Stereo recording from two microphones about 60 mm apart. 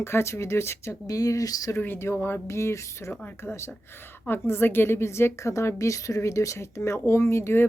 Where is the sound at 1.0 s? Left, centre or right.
Left.